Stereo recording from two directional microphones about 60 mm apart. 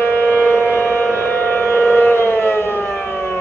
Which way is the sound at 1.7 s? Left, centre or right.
Left.